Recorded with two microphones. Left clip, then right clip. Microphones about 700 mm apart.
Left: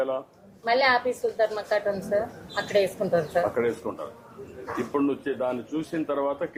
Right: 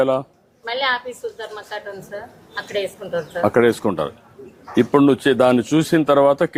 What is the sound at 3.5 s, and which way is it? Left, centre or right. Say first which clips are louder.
Speech: right 11 dB; right.